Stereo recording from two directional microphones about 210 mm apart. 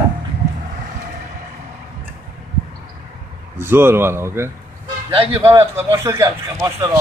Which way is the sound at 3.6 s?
10° right (ahead or behind).